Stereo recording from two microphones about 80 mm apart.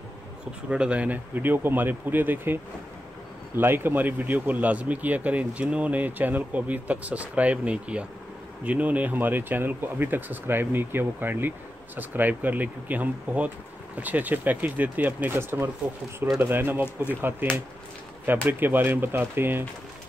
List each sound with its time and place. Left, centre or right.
0.7 s speech: centre
16.8 s speech: left
17.2 s speech: right